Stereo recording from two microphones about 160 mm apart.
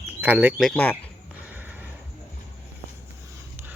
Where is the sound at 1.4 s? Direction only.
10° right (ahead or behind).